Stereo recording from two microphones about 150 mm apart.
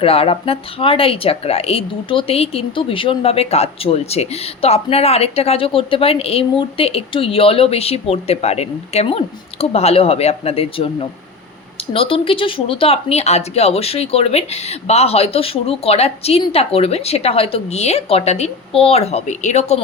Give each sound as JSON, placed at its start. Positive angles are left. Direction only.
{"t": 0.0, "sound": "a woman's voice", "side_deg": 40}